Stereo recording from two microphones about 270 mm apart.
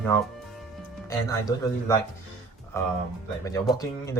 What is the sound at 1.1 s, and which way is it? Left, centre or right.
Speech, centre.